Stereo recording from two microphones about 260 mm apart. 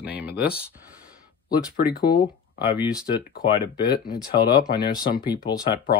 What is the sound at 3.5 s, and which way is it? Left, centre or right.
Speech, centre.